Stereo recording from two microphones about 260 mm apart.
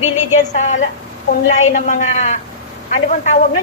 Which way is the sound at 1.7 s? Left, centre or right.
Left.